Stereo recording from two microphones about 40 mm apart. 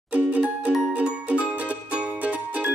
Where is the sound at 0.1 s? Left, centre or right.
Right.